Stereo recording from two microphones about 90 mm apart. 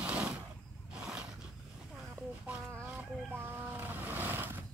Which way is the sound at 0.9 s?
10° right (ahead or behind).